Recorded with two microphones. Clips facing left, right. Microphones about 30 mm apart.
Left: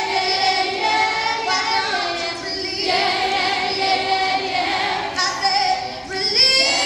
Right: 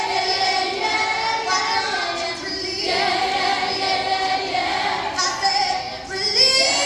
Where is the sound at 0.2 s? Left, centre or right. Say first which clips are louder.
Left 3 dB; left.